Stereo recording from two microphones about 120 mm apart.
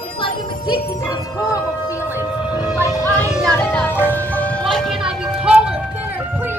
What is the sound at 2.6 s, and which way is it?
Music, 35° left (ahead or behind).